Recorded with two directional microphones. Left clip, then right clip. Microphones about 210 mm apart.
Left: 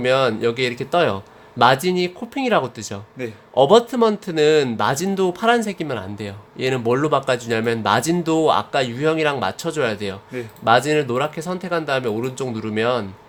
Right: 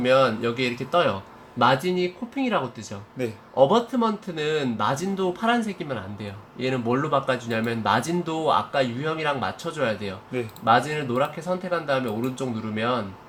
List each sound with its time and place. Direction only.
0.0 s speech: 45° left (ahead or behind)
3.2 s a man's voice: 10° right (ahead or behind)
3.5 s speech: 45° left (ahead or behind)